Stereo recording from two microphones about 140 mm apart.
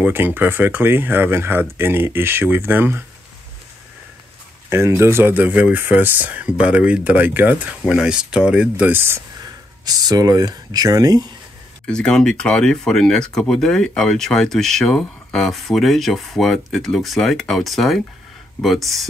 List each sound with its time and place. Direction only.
0.0 s speech: 15° right (ahead or behind)
4.6 s speech: 20° right (ahead or behind)
11.8 s speech: 5° left (ahead or behind)